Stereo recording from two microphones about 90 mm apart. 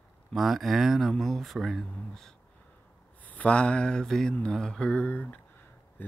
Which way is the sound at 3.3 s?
15° left (ahead or behind).